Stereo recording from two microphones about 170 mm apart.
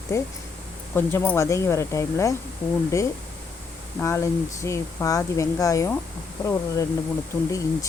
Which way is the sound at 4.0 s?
15° left (ahead or behind).